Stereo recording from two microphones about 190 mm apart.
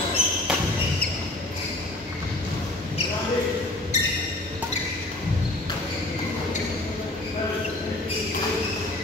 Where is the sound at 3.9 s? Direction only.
35° left (ahead or behind).